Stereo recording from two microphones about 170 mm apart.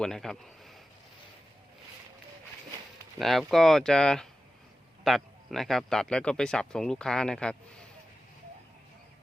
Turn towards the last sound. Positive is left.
turn(degrees=5)  # may be behind; listen again after turning